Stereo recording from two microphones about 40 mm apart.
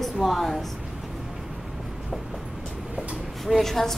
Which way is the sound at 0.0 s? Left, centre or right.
Centre.